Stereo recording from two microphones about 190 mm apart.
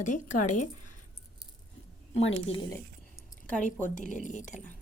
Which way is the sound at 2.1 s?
30° left (ahead or behind).